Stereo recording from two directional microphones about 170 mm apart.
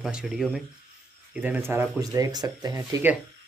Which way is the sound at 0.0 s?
5° right (ahead or behind).